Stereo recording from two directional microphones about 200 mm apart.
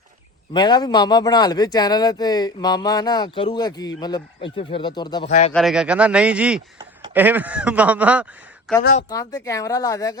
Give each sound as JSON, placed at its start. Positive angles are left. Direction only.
{"t": 0.5, "sound": "a man's voice", "side_deg": 20}
{"t": 5.5, "sound": "speech", "side_deg": 0}
{"t": 9.0, "sound": "speech", "side_deg": 15}